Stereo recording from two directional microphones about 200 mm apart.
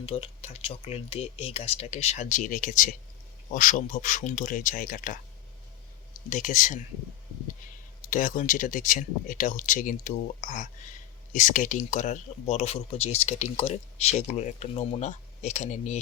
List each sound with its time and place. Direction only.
0.0 s speech: 30° left (ahead or behind)
6.3 s speech: 40° left (ahead or behind)
8.1 s speech: 40° left (ahead or behind)